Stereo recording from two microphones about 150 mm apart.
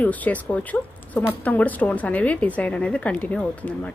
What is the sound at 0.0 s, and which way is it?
Speech, 10° left (ahead or behind).